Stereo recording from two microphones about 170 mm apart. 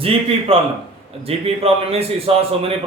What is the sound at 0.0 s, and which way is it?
A man's voice, 35° right (ahead or behind).